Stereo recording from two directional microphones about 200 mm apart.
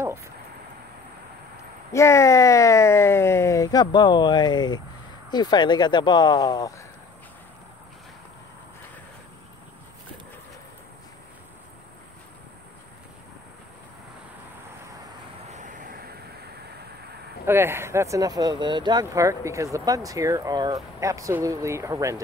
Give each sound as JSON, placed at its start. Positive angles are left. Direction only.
{"t": 1.9, "sound": "speech", "side_deg": 15}
{"t": 15.5, "sound": "a sound", "side_deg": -40}
{"t": 17.5, "sound": "speech", "side_deg": -10}